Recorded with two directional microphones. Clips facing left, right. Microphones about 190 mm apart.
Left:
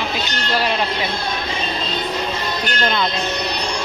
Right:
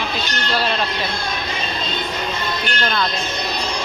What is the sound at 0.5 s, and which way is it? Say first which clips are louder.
Speech: left 2 dB; 15° left (ahead or behind).